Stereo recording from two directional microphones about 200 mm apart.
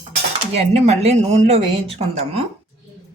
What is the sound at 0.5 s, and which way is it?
Speech, 35° right (ahead or behind).